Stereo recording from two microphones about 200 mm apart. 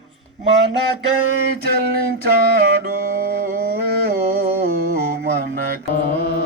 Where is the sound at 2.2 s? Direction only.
50° right (ahead or behind).